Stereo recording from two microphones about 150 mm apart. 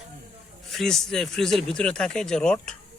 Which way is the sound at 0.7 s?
Centre (ahead or behind).